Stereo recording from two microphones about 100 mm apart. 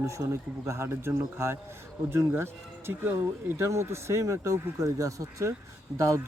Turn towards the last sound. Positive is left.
turn(degrees=-30)  # may be behind; listen again after turning